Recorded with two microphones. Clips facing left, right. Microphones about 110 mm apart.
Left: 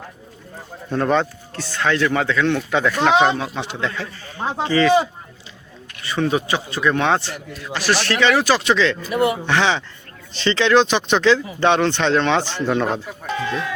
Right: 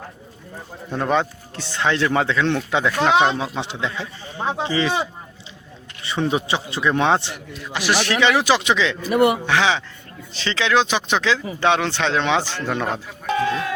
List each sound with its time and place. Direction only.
0.9 s a man's voice: 10° right (ahead or behind)
1.5 s a man's voice: 20° right (ahead or behind)
3.1 s speech: 5° right (ahead or behind)
3.3 s a man's voice: 25° right (ahead or behind)
6.0 s a man's voice: 25° right (ahead or behind)
12.6 s a man's voice: centre (ahead or behind)